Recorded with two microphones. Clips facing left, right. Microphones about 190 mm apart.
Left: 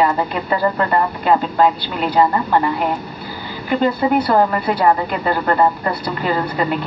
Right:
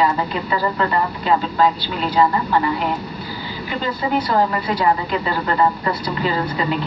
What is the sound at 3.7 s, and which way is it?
A woman's voice, 55° left (ahead or behind).